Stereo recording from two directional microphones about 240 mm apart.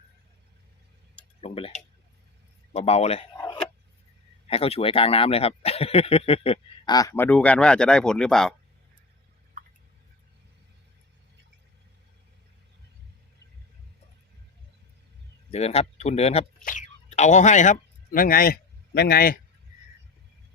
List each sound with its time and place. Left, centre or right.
1.4 s speech: left
3.3 s a sound: centre
4.4 s speech: left; by 8.5 s centre
15.4 s speech: left